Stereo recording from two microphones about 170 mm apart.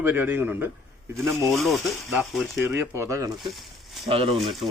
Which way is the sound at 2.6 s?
15° right (ahead or behind).